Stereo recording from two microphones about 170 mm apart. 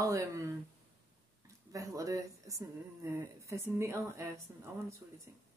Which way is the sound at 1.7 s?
20° right (ahead or behind).